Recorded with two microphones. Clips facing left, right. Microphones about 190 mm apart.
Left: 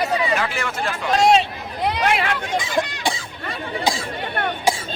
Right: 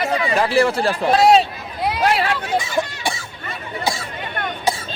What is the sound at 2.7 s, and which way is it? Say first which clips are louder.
Chicken: even; 15° left (ahead or behind).